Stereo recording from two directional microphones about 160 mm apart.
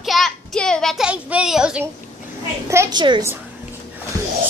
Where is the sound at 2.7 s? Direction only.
15° right (ahead or behind).